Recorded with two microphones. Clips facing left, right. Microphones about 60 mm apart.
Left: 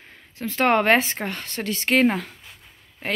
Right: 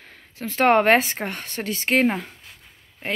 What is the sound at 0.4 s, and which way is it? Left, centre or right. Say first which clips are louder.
Speech: right 2 dB; right.